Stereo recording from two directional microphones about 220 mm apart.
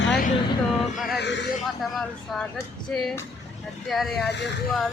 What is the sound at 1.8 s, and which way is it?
Speech, centre (ahead or behind).